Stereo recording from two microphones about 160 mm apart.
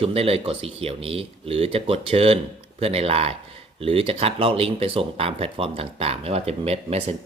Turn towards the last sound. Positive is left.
turn(degrees=-40)  # may be behind; listen again after turning